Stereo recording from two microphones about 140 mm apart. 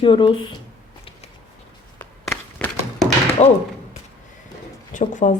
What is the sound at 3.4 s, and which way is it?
Speech, 50° left (ahead or behind).